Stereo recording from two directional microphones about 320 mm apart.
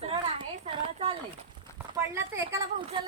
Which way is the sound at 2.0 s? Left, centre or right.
Centre.